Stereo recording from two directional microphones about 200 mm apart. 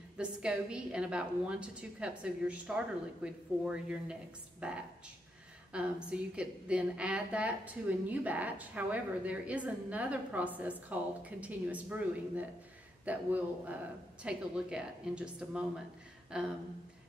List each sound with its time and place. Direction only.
0.2 s a woman's voice: 5° right (ahead or behind)